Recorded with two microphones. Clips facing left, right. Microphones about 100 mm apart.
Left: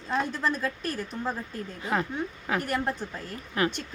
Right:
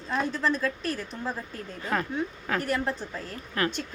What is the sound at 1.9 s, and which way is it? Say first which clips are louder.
A woman's voice: even; 20° left (ahead or behind).